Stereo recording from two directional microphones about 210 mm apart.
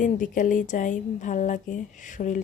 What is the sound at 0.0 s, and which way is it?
A woman's voice, 40° left (ahead or behind).